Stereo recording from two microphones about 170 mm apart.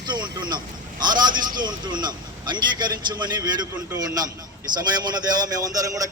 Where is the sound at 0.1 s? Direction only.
25° right (ahead or behind).